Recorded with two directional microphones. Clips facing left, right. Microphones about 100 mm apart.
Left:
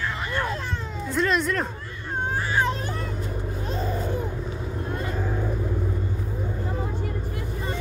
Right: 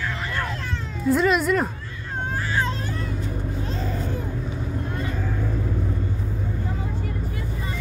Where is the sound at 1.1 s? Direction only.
5° right (ahead or behind).